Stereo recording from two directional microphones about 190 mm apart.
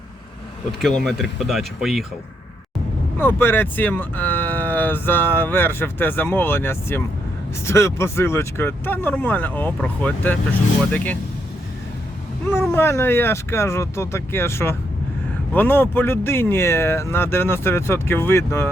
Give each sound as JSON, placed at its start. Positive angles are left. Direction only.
{"t": 0.8, "sound": "speech", "side_deg": 0}
{"t": 3.2, "sound": "speech", "side_deg": 10}
{"t": 12.5, "sound": "speech", "side_deg": 10}